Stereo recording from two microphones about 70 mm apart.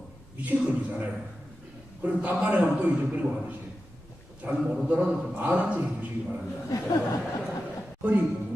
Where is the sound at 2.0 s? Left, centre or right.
Right.